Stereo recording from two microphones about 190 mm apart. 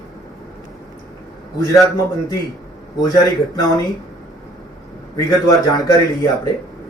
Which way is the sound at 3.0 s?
20° left (ahead or behind).